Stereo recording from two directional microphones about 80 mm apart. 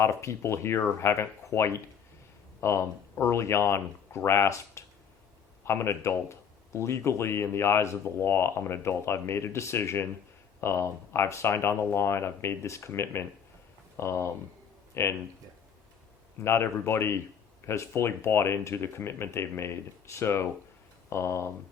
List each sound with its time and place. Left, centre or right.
0.0 s speech: left
16.4 s speech: left